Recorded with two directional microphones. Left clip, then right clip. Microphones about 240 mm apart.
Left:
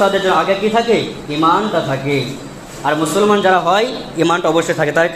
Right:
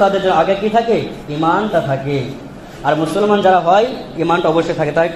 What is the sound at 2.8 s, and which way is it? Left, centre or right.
A man's voice, left.